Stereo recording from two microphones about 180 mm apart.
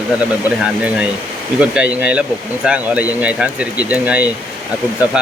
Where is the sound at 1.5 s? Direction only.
5° right (ahead or behind).